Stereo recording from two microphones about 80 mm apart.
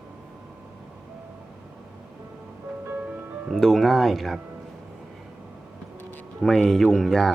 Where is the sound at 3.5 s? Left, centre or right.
Centre.